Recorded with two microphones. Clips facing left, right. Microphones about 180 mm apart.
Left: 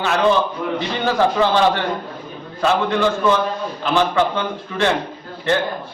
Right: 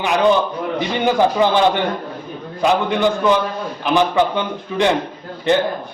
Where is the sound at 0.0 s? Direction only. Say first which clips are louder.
Right 2 dB; 15° right (ahead or behind).